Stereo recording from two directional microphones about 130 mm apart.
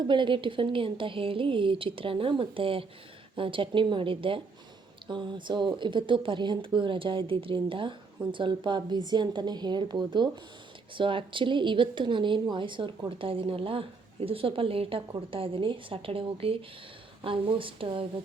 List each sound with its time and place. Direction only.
0.0 s a woman's voice: 40° right (ahead or behind)